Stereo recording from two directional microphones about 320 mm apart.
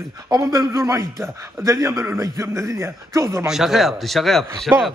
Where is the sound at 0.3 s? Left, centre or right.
Centre.